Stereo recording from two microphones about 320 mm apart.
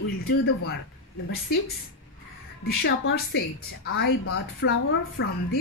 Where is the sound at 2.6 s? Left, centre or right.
Left.